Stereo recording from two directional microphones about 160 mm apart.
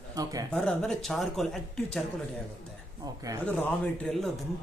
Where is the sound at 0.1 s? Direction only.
20° right (ahead or behind).